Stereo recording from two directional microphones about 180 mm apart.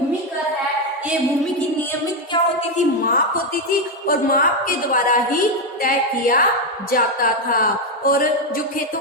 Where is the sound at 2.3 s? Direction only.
25° left (ahead or behind).